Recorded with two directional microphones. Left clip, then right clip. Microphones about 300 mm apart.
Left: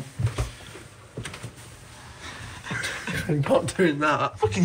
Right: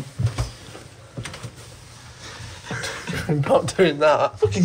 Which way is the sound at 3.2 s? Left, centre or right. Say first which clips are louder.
Right 4 dB; centre.